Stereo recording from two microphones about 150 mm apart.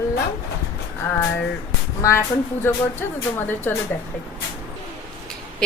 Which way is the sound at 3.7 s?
15° left (ahead or behind).